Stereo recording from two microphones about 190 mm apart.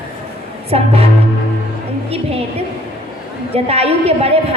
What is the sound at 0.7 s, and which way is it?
Speech, 35° right (ahead or behind).